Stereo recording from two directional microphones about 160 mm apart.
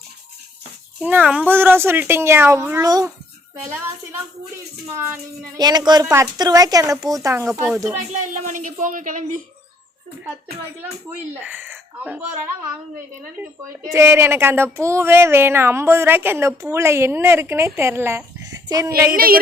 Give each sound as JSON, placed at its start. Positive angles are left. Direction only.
{"t": 1.0, "sound": "speech", "side_deg": -10}
{"t": 4.9, "sound": "a woman's voice", "side_deg": -20}
{"t": 7.9, "sound": "speech", "side_deg": -50}
{"t": 11.1, "sound": "speech", "side_deg": -10}
{"t": 13.9, "sound": "speech", "side_deg": -15}
{"t": 19.1, "sound": "a sound", "side_deg": -65}